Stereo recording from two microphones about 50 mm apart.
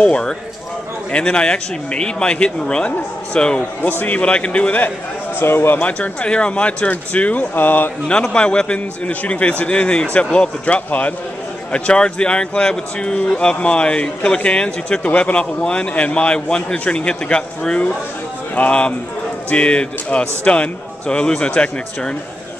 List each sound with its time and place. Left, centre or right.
0.0 s speech: centre
5.4 s speech: left
5.8 s speech: left
8.1 s speech: left